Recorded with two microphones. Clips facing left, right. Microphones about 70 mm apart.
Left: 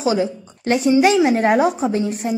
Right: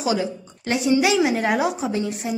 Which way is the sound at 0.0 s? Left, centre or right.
Left.